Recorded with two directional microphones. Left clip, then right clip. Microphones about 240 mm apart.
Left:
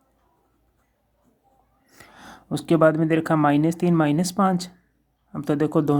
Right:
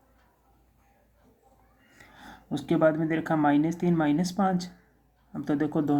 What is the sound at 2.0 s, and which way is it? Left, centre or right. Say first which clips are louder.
Speech: left 4 dB; left.